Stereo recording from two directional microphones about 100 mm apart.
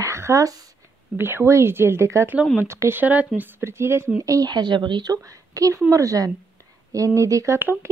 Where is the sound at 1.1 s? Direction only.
25° right (ahead or behind).